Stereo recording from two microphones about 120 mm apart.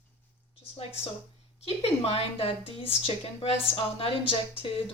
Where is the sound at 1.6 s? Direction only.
55° left (ahead or behind).